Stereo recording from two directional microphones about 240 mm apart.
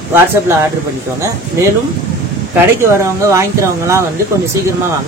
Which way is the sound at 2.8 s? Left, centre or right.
Centre.